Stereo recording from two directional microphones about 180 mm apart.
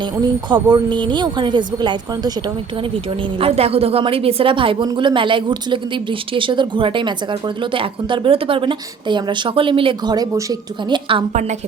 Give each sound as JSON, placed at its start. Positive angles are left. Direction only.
{"t": 0.2, "sound": "a woman's voice", "side_deg": -25}
{"t": 3.4, "sound": "a woman's voice", "side_deg": -35}